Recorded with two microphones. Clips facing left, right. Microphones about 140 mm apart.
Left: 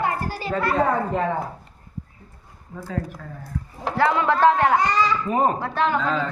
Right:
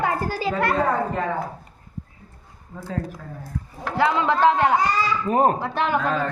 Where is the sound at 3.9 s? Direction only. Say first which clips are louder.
Even; 20° right (ahead or behind).